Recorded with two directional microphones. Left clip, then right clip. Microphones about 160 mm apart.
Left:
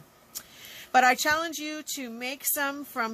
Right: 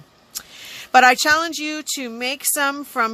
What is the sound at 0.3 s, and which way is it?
Speech, 45° right (ahead or behind).